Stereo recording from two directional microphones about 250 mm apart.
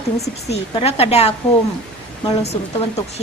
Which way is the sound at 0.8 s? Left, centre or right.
Left.